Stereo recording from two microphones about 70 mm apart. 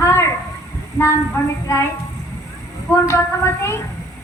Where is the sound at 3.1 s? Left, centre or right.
Left.